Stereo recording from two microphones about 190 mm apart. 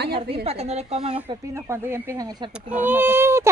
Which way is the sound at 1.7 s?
15° right (ahead or behind).